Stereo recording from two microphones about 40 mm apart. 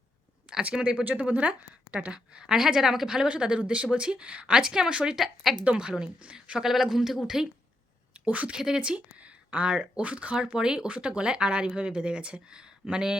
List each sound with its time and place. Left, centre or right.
0.6 s speech: right; by 3.2 s centre
3.2 s speech: right
4.9 s speech: right
5.1 s speech: centre
6.6 s speech: centre
8.2 s speech: right
8.5 s speech: centre; by 10.3 s right
10.3 s speech: centre